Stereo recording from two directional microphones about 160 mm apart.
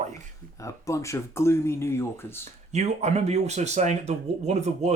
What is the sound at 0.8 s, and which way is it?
Speech, 20° left (ahead or behind).